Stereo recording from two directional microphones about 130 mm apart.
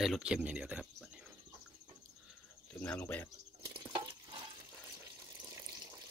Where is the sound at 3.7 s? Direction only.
40° right (ahead or behind).